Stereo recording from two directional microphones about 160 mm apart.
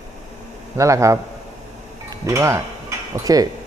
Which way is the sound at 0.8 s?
20° right (ahead or behind).